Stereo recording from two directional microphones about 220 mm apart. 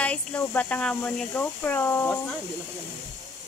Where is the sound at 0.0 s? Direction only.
5° left (ahead or behind).